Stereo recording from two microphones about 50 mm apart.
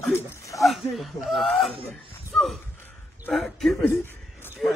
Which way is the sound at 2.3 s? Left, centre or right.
Centre.